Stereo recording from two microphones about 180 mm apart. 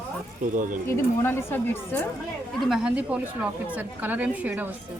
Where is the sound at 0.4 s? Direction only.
50° right (ahead or behind).